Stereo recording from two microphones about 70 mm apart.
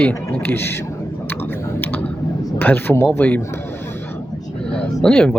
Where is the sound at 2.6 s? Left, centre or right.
Left.